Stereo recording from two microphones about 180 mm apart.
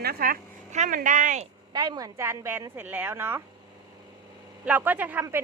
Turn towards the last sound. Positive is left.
turn(degrees=-15)  # may be behind; listen again after turning